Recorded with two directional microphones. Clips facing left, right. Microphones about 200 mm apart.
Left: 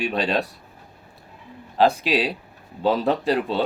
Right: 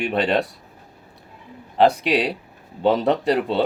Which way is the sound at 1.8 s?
65° right (ahead or behind).